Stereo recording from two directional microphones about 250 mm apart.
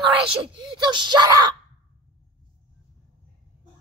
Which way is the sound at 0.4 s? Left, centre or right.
Centre.